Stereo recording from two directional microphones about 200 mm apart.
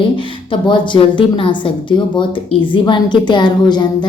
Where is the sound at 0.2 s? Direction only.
25° left (ahead or behind).